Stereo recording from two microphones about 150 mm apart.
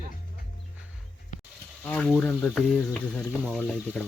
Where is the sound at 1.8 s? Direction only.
10° left (ahead or behind).